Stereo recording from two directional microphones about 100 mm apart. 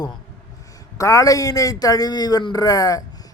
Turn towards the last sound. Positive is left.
turn(degrees=35)  # may be behind; listen again after turning